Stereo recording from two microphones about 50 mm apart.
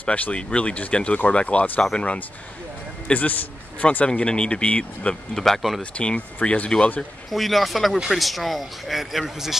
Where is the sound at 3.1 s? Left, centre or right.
Left.